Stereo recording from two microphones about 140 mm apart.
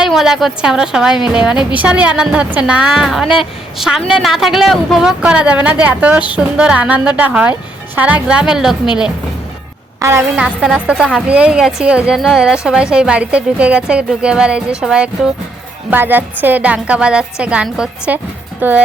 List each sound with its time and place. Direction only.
0.0 s a woman's voice: centre (ahead or behind)
10.0 s a woman's voice: 20° right (ahead or behind)
10.4 s a woman's voice: 5° right (ahead or behind)